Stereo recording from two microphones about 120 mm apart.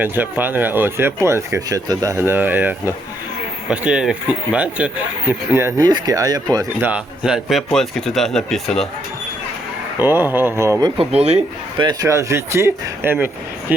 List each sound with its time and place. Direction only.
0.0 s speech: 15° right (ahead or behind)
5.8 s speech: 30° right (ahead or behind)
6.8 s speech: 10° right (ahead or behind)
10.0 s speech: 15° right (ahead or behind)
10.8 s speech: 35° right (ahead or behind)
11.1 s speech: 60° right (ahead or behind)
11.8 s speech: 30° right (ahead or behind); by 13.7 s 15° right (ahead or behind)